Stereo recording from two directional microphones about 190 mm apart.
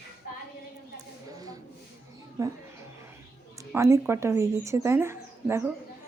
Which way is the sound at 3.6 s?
15° right (ahead or behind).